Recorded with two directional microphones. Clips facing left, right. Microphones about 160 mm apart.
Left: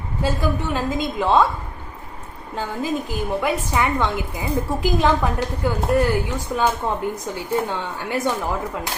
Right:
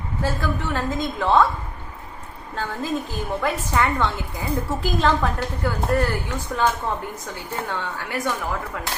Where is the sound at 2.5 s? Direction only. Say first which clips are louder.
Left 2 dB; 15° left (ahead or behind).